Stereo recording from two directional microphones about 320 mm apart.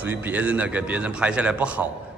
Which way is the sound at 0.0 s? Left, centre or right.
Centre.